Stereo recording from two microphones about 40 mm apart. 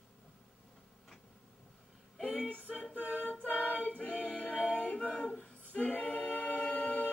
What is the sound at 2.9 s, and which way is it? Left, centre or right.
A capella, left.